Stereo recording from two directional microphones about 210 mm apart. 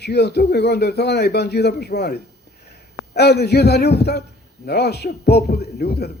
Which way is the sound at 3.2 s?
50° left (ahead or behind).